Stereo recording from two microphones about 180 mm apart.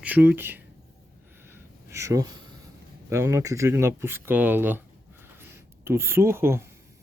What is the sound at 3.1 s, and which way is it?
Speech, 15° right (ahead or behind).